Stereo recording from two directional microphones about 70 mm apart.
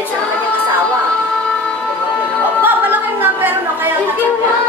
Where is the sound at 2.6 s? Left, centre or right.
Right.